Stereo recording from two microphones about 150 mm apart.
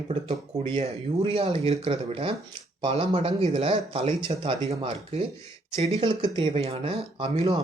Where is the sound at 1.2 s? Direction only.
40° right (ahead or behind).